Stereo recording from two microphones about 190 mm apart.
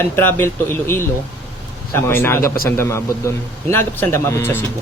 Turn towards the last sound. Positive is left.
turn(degrees=10)  # may be behind; listen again after turning